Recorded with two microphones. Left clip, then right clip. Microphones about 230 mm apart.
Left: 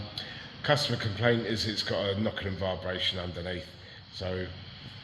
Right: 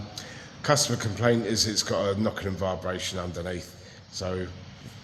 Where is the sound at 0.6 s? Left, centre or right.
Centre.